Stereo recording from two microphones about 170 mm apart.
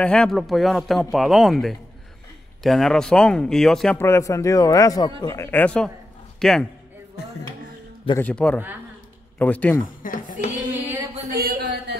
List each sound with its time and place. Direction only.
0.0 s speech: 5° left (ahead or behind)
4.0 s speech: 15° left (ahead or behind)
8.2 s speech: 10° left (ahead or behind)
10.0 s speech: 50° left (ahead or behind)
10.7 s a sound: 10° right (ahead or behind)
11.3 s a sound: 60° right (ahead or behind)